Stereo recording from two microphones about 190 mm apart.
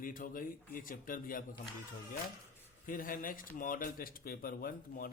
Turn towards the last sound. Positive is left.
turn(degrees=50)  # may be behind; listen again after turning